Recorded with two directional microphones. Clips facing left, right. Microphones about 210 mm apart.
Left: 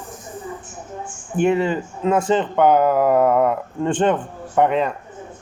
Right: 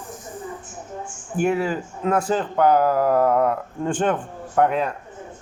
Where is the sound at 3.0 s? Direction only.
65° left (ahead or behind).